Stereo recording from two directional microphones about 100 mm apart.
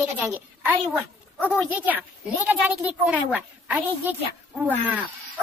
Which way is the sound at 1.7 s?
15° right (ahead or behind).